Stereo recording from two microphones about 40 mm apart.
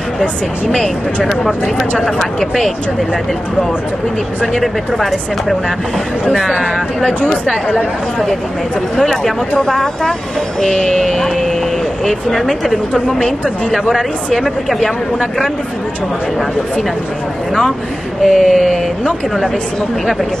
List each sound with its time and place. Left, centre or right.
0.7 s speech: centre
4.9 s speech: centre
8.9 s speech: centre
10.7 s speech: centre
18.2 s speech: centre